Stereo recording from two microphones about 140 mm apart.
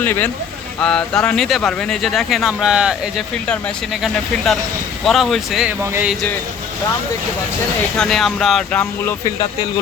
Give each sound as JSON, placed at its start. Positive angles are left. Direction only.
{"t": 0.0, "sound": "speech", "side_deg": 15}
{"t": 3.3, "sound": "speech", "side_deg": 5}
{"t": 5.8, "sound": "speech", "side_deg": -20}
{"t": 7.9, "sound": "speech", "side_deg": 5}